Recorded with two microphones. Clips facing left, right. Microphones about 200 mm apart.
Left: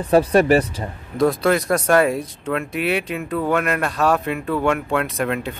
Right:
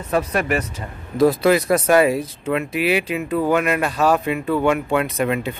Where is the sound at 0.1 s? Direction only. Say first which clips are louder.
Left 6 dB; 30° left (ahead or behind).